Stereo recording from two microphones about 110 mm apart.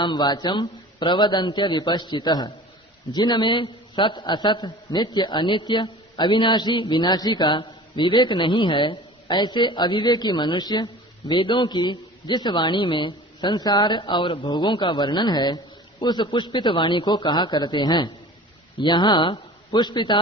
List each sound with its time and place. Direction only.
0.0 s a man's voice: 45° left (ahead or behind)
9.2 s a man's voice: 40° left (ahead or behind)